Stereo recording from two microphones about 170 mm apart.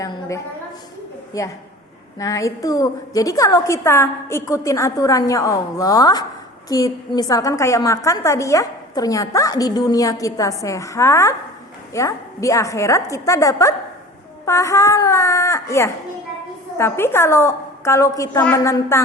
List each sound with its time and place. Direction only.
0.0 s a woman's voice: 20° left (ahead or behind)
1.3 s a woman's voice: 20° left (ahead or behind)